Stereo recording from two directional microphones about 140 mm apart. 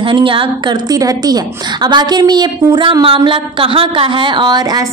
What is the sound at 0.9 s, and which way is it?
A woman's voice, 25° right (ahead or behind).